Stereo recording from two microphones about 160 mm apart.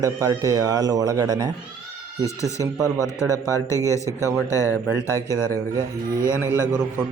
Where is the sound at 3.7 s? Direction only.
20° right (ahead or behind).